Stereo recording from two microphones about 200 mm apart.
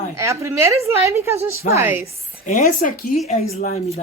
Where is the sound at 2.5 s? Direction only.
40° left (ahead or behind).